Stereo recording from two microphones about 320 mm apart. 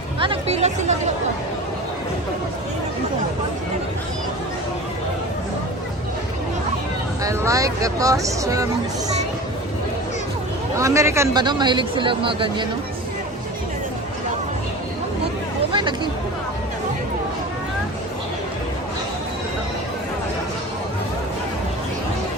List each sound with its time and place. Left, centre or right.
0.2 s speech: centre
7.2 s speech: centre
10.8 s speech: centre
15.7 s speech: centre